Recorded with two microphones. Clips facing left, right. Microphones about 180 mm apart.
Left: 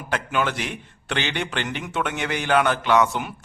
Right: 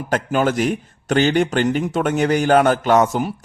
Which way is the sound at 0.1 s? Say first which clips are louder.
Right 6 dB; 40° right (ahead or behind).